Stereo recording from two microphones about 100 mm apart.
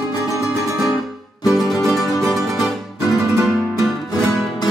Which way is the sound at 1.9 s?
35° left (ahead or behind).